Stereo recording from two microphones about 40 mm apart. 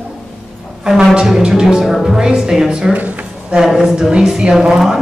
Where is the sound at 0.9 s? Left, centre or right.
Centre.